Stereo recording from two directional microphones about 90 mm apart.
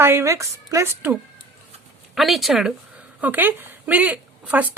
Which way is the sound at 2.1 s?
Centre (ahead or behind).